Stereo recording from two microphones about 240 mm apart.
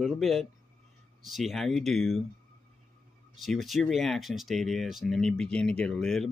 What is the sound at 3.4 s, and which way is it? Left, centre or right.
Speech, centre.